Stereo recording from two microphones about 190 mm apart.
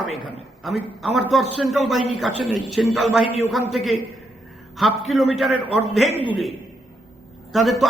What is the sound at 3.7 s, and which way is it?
A man's voice, centre (ahead or behind).